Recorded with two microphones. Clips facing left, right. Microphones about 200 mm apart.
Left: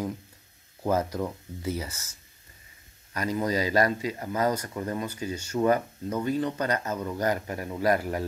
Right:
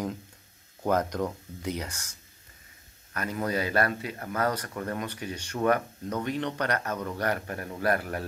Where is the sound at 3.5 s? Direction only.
60° right (ahead or behind).